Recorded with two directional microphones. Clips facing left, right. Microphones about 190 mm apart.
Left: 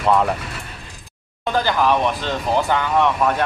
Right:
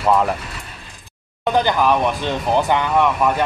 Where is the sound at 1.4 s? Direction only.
20° right (ahead or behind).